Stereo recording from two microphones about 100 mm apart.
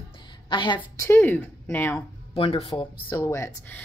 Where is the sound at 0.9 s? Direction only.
25° left (ahead or behind).